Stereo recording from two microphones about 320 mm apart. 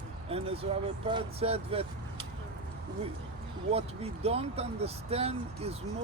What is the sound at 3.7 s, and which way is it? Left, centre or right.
Speech, centre.